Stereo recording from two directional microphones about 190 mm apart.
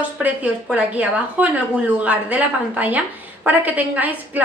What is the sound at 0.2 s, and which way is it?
A woman's voice, 10° right (ahead or behind).